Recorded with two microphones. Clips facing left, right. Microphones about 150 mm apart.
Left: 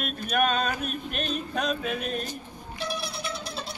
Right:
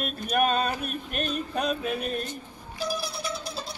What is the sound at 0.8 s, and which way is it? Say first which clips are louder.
Music: even; 45° right (ahead or behind).